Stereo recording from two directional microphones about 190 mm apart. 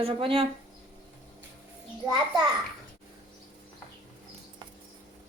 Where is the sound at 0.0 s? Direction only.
30° right (ahead or behind).